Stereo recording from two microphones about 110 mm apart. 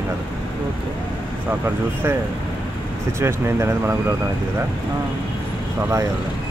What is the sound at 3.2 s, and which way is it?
Speech, 25° right (ahead or behind).